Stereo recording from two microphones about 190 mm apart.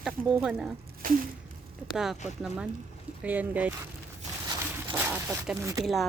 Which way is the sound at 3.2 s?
10° right (ahead or behind).